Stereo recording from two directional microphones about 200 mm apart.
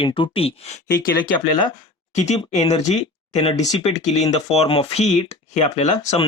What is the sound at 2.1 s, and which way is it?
Speech, 35° left (ahead or behind).